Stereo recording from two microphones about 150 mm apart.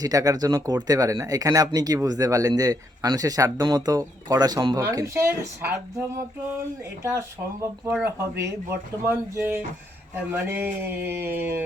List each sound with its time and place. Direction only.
0.0 s speech: 25° right (ahead or behind)